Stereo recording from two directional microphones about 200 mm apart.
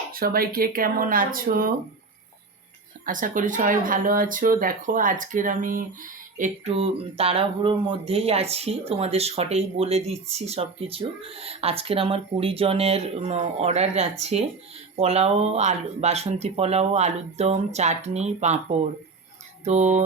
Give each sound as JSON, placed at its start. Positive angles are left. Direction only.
{"t": 0.1, "sound": "speech", "side_deg": -45}
{"t": 3.1, "sound": "speech", "side_deg": -40}
{"t": 19.6, "sound": "speech", "side_deg": -35}